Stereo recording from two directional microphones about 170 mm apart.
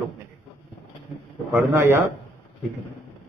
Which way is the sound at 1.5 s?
15° right (ahead or behind).